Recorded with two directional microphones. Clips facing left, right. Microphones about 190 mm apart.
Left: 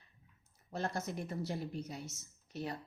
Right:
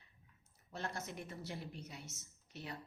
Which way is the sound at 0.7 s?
40° left (ahead or behind).